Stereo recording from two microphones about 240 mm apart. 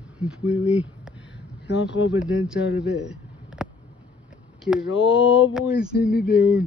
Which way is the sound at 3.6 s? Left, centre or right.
Centre.